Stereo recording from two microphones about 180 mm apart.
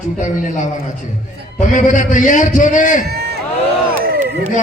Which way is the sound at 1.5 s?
45° left (ahead or behind).